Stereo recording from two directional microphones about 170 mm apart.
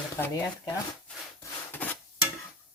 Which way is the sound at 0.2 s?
20° left (ahead or behind).